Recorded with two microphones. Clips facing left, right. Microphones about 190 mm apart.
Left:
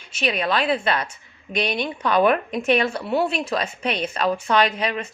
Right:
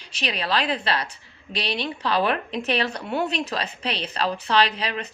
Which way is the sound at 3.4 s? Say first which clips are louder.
Left 4 dB; 35° right (ahead or behind).